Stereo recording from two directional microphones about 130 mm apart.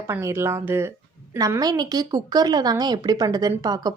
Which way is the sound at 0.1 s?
20° right (ahead or behind).